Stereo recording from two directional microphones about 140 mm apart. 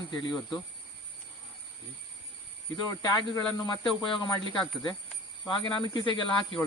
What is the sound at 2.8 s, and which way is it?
Speech, 30° left (ahead or behind).